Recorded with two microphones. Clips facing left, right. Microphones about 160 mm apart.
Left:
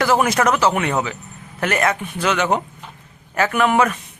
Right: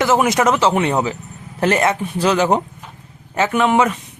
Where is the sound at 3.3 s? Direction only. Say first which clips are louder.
Right 2 dB; 20° right (ahead or behind).